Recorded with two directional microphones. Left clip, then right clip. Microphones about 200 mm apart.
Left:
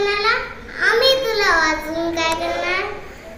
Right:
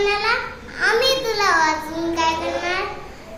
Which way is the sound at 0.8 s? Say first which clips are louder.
Left 3 dB; 20° right (ahead or behind).